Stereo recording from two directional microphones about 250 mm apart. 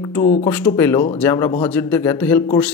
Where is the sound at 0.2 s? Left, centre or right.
Left.